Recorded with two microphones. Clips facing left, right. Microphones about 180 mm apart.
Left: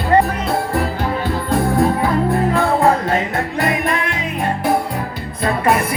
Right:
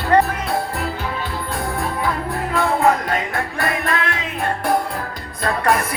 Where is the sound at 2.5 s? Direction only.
30° left (ahead or behind); by 6.0 s 10° left (ahead or behind).